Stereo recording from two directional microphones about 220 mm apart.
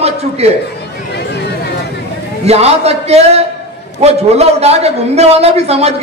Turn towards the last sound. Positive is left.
turn(degrees=-30)  # may be behind; listen again after turning